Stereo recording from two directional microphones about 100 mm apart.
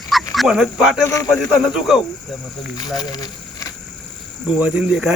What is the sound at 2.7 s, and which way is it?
Speech, 40° left (ahead or behind).